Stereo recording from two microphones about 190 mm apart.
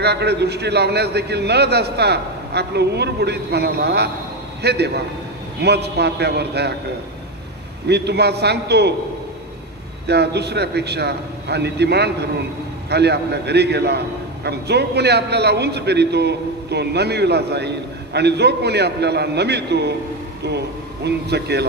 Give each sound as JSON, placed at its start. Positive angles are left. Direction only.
{"t": 0.0, "sound": "a man's voice", "side_deg": -60}
{"t": 7.9, "sound": "a man's voice", "side_deg": -60}
{"t": 10.1, "sound": "a man's voice", "side_deg": -60}
{"t": 21.0, "sound": "a man's voice", "side_deg": -60}